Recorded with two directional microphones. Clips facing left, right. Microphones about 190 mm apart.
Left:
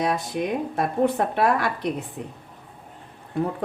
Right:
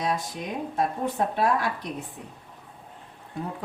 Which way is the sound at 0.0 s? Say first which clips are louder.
Left 5 dB; 60° left (ahead or behind).